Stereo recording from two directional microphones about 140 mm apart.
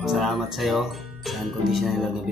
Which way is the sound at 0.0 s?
Centre (ahead or behind).